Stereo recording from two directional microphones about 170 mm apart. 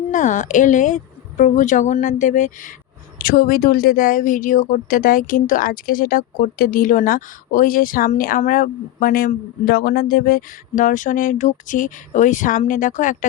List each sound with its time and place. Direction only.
0.1 s speech: 50° left (ahead or behind)